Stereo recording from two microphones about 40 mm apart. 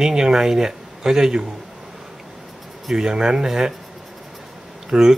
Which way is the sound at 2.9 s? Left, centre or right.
Centre.